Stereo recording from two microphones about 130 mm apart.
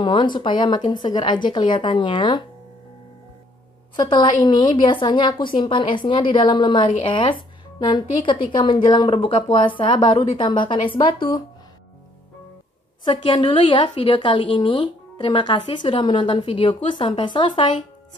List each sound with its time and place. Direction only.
0.0 s a woman's voice: 35° left (ahead or behind)
3.9 s a woman's voice: 35° left (ahead or behind)
13.0 s a woman's voice: 40° left (ahead or behind)